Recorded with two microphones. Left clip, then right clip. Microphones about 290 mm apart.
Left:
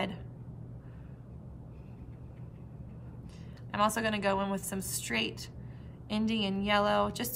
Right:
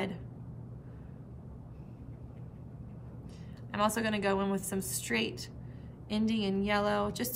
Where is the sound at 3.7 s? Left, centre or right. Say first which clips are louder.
Left 2 dB; centre.